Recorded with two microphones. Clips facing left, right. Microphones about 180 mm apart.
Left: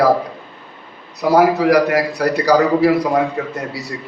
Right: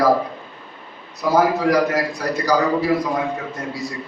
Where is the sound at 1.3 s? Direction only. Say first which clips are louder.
Left 4 dB; 70° left (ahead or behind).